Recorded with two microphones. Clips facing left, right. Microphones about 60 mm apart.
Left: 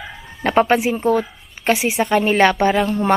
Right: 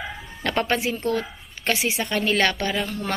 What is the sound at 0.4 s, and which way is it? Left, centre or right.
A woman's voice, centre.